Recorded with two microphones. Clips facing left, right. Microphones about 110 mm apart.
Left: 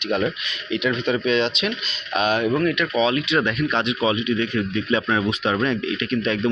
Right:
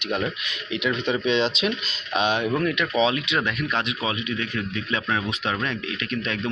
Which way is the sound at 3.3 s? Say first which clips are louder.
Left 4 dB; 5° right (ahead or behind).